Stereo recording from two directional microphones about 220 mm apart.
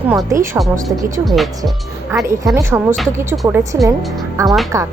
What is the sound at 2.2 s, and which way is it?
A woman's voice, 15° right (ahead or behind).